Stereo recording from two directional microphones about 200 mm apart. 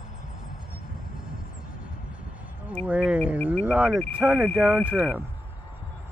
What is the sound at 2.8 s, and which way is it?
Speech, 5° right (ahead or behind).